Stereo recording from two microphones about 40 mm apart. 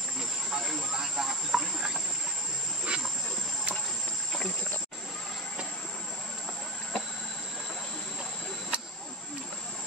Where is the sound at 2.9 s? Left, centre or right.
Right.